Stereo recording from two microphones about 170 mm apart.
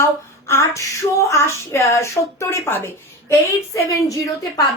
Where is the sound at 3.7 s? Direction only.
20° left (ahead or behind).